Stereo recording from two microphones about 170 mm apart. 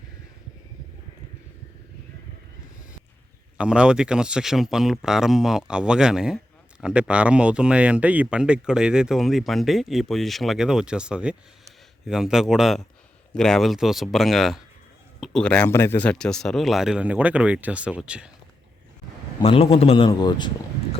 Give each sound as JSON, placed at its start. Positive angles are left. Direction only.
{"t": 3.6, "sound": "speech", "side_deg": -5}
{"t": 19.4, "sound": "a man's voice", "side_deg": 35}
{"t": 20.1, "sound": "speech", "side_deg": 25}